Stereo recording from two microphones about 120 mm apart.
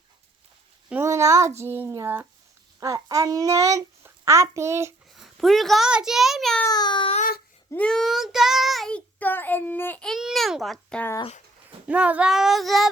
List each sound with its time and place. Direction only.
1.0 s a child's voice: 25° right (ahead or behind)
5.2 s a child's voice: centre (ahead or behind)
6.7 s speech: 35° left (ahead or behind)
7.7 s child singing: 10° left (ahead or behind)
9.1 s a child's voice: 15° left (ahead or behind)
10.0 s a child's voice: centre (ahead or behind)
11.9 s a child's voice: 10° right (ahead or behind)